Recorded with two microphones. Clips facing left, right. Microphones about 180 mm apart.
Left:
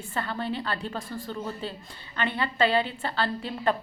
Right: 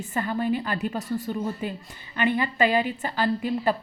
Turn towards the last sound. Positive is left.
turn(degrees=-10)  # may be behind; listen again after turning